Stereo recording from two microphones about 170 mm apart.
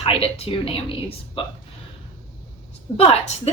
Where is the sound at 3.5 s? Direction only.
35° left (ahead or behind).